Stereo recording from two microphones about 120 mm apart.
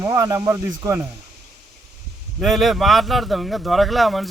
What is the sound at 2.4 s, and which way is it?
Speech, centre (ahead or behind).